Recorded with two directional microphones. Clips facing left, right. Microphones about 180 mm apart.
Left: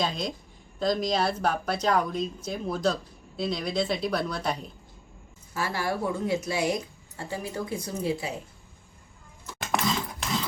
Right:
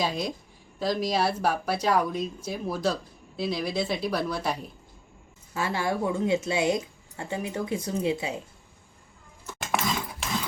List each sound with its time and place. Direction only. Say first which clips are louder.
0.0 s a woman's voice: right 1 dB; 10° right (ahead or behind)
5.5 s speech: right 2 dB; 20° right (ahead or behind)
9.8 s dog: left 1 dB; 10° right (ahead or behind)